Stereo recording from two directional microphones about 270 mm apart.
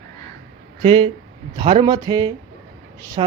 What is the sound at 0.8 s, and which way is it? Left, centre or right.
A woman's voice, centre.